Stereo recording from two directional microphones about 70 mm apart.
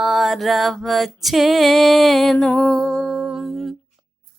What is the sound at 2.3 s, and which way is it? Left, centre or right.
Music, centre.